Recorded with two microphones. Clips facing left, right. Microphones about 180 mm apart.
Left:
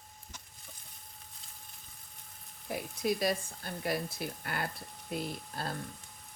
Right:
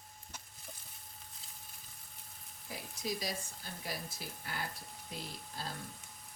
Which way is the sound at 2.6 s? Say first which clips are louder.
Left 8 dB; 60° left (ahead or behind).